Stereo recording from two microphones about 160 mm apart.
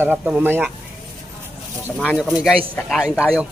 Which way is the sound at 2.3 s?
Centre (ahead or behind).